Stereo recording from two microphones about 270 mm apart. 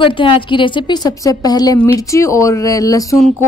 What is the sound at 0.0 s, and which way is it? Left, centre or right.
Speech, centre.